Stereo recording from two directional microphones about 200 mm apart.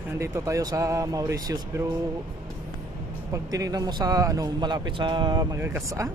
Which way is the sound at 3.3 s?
15° right (ahead or behind).